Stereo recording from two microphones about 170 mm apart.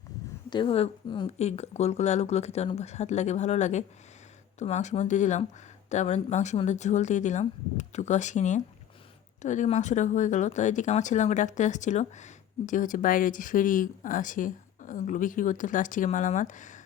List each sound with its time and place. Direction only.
0.5 s speech: 30° left (ahead or behind); by 16.8 s 45° left (ahead or behind)